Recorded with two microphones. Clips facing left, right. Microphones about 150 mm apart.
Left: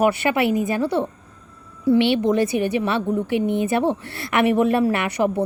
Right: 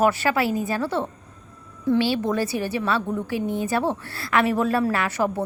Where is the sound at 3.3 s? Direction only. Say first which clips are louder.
Left 5 dB; 65° left (ahead or behind).